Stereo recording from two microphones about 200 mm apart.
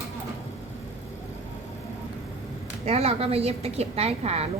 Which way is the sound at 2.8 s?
30° right (ahead or behind).